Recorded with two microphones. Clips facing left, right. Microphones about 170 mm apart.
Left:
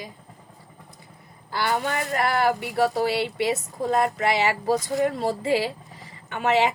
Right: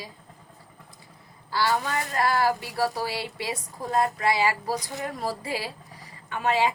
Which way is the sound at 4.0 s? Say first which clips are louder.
Right 1 dB; 25° left (ahead or behind).